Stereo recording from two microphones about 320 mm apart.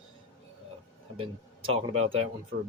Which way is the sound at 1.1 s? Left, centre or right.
Centre.